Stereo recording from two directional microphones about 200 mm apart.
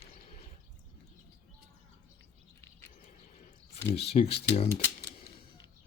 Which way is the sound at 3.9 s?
55° left (ahead or behind).